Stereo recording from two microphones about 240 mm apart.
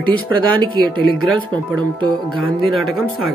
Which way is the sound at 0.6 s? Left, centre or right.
Right.